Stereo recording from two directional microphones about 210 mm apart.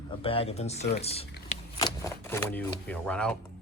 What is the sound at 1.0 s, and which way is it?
Typing, 30° left (ahead or behind).